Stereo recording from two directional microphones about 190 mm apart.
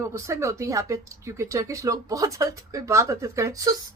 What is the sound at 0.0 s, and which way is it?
A woman's voice, 15° right (ahead or behind).